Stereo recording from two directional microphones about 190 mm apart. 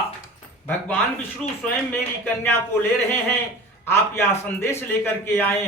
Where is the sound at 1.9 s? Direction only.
10° left (ahead or behind).